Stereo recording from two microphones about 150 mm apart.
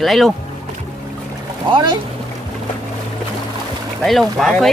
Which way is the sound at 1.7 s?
30° right (ahead or behind).